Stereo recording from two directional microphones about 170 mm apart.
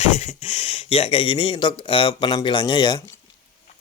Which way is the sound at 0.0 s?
40° left (ahead or behind).